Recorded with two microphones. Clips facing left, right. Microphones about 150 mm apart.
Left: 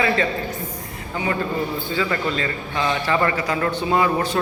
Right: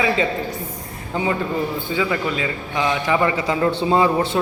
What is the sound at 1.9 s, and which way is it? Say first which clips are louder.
A man's voice: right 1 dB; 10° right (ahead or behind).